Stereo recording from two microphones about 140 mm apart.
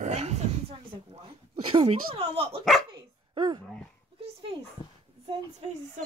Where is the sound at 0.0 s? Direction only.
50° right (ahead or behind).